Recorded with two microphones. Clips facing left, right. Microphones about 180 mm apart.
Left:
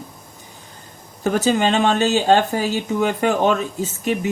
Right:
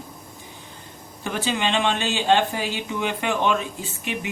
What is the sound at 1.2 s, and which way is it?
Speech, 45° left (ahead or behind).